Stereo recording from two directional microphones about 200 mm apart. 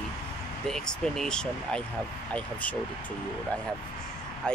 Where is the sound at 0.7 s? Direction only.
5° left (ahead or behind).